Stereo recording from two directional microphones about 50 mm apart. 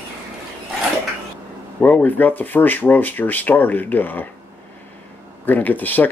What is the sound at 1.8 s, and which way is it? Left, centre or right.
Speech, left.